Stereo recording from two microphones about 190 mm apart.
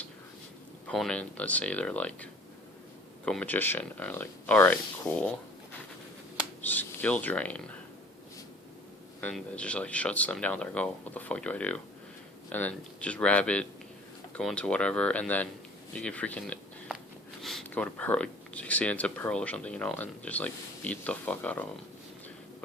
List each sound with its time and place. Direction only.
0.9 s speech: 5° left (ahead or behind)
6.6 s speech: 10° left (ahead or behind)
9.2 s speech: 5° left (ahead or behind)